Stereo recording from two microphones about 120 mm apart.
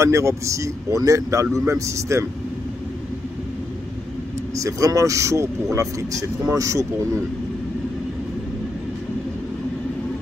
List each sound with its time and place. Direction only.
0.0 s speech: 25° right (ahead or behind)
4.6 s speech: 30° right (ahead or behind)